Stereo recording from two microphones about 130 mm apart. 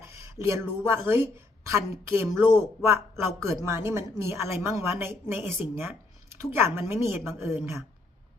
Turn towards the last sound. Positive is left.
turn(degrees=-20)  # may be behind; listen again after turning